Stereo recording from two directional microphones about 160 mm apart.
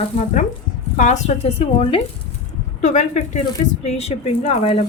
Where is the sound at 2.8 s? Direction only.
50° left (ahead or behind).